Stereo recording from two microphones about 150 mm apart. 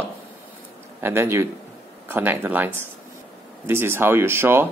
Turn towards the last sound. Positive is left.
turn(degrees=-15)  # may be behind; listen again after turning